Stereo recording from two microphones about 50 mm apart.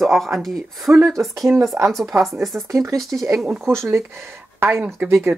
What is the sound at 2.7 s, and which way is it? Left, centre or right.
Speech, right.